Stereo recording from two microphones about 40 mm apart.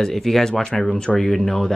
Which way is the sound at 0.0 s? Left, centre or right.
Centre.